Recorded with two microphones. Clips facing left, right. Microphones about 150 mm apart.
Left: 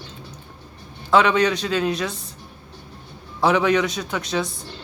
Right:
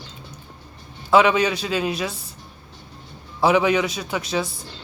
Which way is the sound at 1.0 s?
5° right (ahead or behind).